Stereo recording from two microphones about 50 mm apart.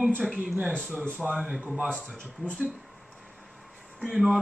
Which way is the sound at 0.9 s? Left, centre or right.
Right.